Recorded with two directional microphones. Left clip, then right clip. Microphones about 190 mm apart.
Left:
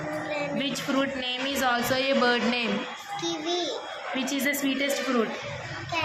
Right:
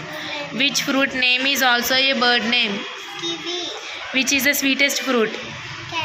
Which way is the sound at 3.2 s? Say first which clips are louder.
Right 3 dB; 25° left (ahead or behind).